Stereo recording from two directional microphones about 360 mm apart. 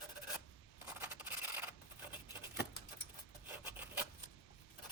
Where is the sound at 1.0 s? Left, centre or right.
Centre.